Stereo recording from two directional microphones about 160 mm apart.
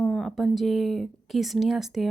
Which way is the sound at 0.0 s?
5° left (ahead or behind).